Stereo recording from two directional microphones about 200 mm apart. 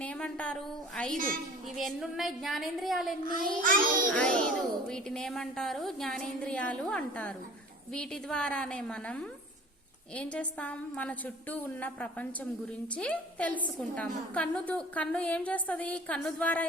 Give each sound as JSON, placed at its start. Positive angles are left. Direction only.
{"t": 0.0, "sound": "speech", "side_deg": 5}
{"t": 1.1, "sound": "a child's voice", "side_deg": -45}
{"t": 1.7, "sound": "speech", "side_deg": 0}
{"t": 3.2, "sound": "a child's voice", "side_deg": -45}
{"t": 4.1, "sound": "a woman's voice", "side_deg": 5}